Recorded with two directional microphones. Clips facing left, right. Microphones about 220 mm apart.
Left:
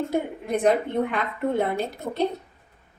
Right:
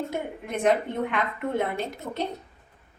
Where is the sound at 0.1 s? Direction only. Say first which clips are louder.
Left 6 dB; 35° left (ahead or behind).